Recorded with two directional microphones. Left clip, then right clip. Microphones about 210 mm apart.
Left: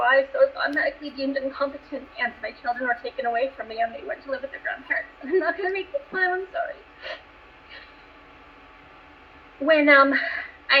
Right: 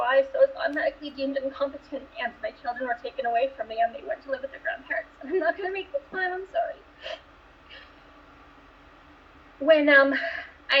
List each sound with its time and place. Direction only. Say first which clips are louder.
0.0 s a sound: left 2 dB; 30° left (ahead or behind)
1.0 s speech: left 1 dB; 15° right (ahead or behind)
1.3 s speech: left 3 dB; 30° left (ahead or behind)
9.6 s a woman's voice: left 2 dB; 25° left (ahead or behind)